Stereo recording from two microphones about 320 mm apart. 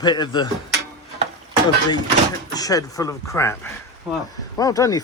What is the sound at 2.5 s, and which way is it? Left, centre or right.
Speech, centre.